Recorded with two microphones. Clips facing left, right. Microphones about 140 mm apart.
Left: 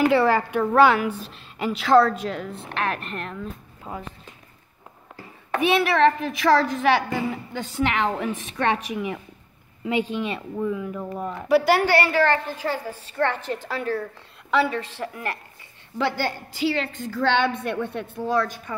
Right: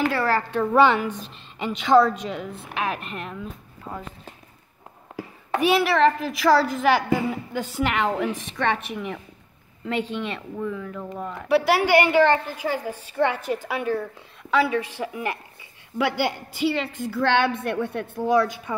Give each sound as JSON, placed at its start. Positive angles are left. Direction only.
{"t": 0.0, "sound": "speech", "side_deg": 20}
{"t": 0.7, "sound": "a woman's voice", "side_deg": 5}
{"t": 3.9, "sound": "speech", "side_deg": 5}
{"t": 5.5, "sound": "a woman's voice", "side_deg": -5}
{"t": 11.4, "sound": "a woman's voice", "side_deg": 0}
{"t": 11.8, "sound": "a woman's voice", "side_deg": -15}